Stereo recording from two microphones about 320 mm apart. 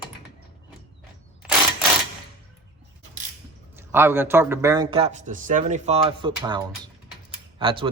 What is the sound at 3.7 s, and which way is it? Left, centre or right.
A man's voice, centre.